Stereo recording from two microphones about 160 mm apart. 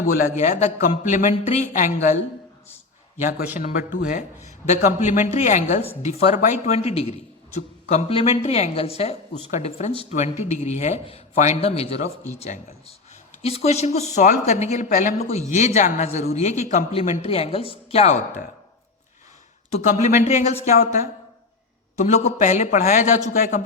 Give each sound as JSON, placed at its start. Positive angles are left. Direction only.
{"t": 0.0, "sound": "speech", "side_deg": 55}
{"t": 1.7, "sound": "speech", "side_deg": 55}
{"t": 3.5, "sound": "speech", "side_deg": 50}
{"t": 19.7, "sound": "speech", "side_deg": 50}